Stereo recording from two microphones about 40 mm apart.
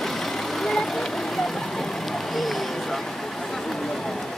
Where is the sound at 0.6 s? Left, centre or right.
Centre.